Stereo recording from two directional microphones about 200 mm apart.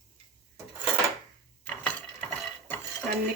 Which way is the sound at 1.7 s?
10° left (ahead or behind).